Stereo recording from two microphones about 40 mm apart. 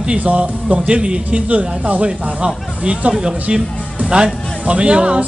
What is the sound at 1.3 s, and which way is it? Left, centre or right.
Speech, right.